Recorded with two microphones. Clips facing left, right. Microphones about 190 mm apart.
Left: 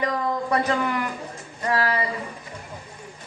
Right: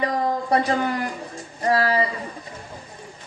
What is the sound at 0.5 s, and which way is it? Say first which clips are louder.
A woman's voice: right 2 dB; 35° right (ahead or behind).